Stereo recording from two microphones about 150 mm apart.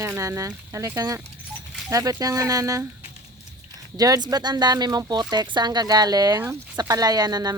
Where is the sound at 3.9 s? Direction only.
25° right (ahead or behind).